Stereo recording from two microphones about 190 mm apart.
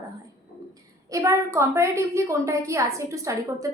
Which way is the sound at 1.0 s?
15° right (ahead or behind).